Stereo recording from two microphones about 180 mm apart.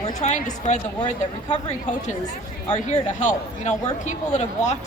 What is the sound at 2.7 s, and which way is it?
A woman's voice, 40° left (ahead or behind).